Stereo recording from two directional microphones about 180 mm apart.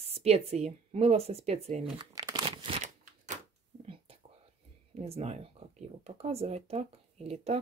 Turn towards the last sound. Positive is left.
turn(degrees=-35)  # may be behind; listen again after turning